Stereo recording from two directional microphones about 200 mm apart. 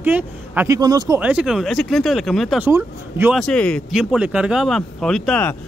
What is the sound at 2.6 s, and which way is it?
Speech, 10° right (ahead or behind).